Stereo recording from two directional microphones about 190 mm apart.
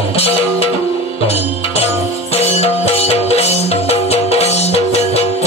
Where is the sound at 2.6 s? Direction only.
30° left (ahead or behind).